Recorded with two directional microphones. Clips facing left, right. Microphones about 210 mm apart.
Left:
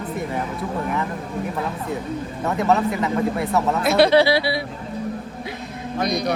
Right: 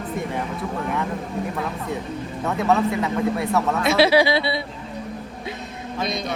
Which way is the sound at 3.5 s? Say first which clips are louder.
Left 2 dB; centre (ahead or behind).